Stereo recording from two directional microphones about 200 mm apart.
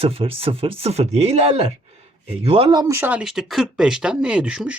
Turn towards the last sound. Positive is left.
turn(degrees=-5)  # may be behind; listen again after turning